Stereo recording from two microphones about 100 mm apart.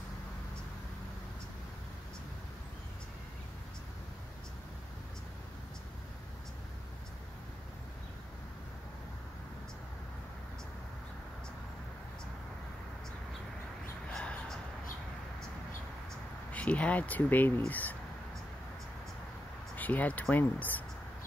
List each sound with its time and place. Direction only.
14.1 s a sound: 10° left (ahead or behind)
16.5 s speech: 15° left (ahead or behind)
19.7 s speech: 15° left (ahead or behind)